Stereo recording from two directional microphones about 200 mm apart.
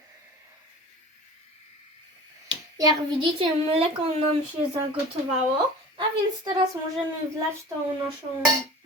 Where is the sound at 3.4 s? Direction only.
30° right (ahead or behind).